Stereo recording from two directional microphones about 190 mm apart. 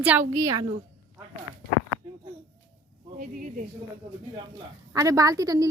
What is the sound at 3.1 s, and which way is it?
Speech, 45° right (ahead or behind).